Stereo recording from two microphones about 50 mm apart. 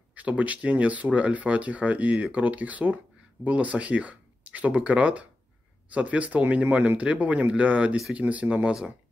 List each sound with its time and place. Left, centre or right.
0.1 s speech: right